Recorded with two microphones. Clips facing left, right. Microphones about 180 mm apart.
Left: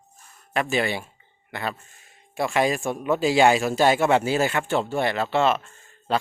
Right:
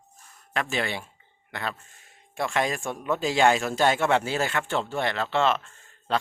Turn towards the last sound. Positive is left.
turn(degrees=10)  # may be behind; listen again after turning